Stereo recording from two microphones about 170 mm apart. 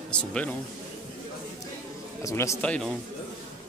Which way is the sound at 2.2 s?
15° left (ahead or behind).